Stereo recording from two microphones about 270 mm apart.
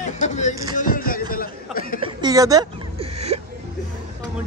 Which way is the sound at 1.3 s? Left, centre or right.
Left.